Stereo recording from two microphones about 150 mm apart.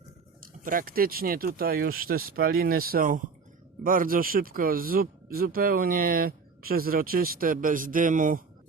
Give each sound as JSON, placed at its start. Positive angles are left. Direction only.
{"t": 0.6, "sound": "speech", "side_deg": -70}